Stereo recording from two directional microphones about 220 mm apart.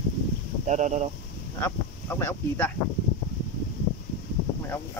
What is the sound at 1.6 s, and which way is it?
Speech, 10° left (ahead or behind).